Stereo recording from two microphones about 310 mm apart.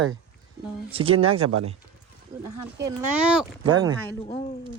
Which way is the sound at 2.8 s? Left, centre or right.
Centre.